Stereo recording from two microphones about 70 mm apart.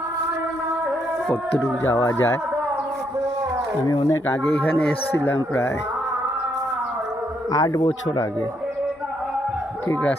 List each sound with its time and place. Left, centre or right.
2.0 s speech: left
3.8 s speech: left
4.4 s speech: left
7.5 s speech: left
9.9 s speech: left